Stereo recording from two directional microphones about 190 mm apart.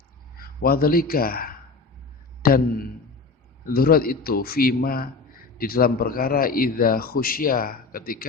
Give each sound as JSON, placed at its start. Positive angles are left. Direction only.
{"t": 0.3, "sound": "a man's voice", "side_deg": 50}